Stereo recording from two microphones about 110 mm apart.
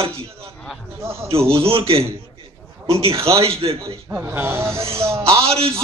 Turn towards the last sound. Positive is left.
turn(degrees=-60)  # may be behind; listen again after turning